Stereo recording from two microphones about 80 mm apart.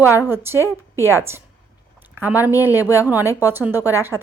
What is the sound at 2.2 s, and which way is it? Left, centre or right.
Speech, right.